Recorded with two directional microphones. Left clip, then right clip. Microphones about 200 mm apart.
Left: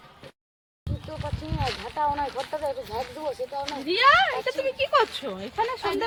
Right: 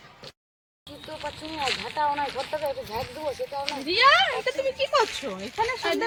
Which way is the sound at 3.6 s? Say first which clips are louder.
Even; 40° right (ahead or behind).